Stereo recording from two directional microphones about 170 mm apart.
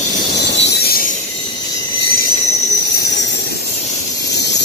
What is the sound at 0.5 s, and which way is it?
Train, 90° left.